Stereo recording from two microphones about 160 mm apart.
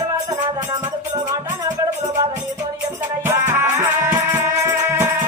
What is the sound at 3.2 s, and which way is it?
Music, 15° right (ahead or behind).